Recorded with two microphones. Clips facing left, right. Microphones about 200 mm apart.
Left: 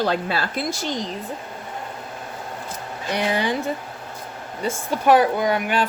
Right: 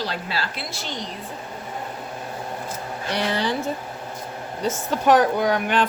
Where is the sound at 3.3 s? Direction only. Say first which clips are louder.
Left 2 dB; 15° left (ahead or behind).